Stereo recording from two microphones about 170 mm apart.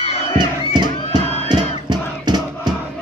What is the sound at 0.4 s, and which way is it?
Crowd, 25° right (ahead or behind).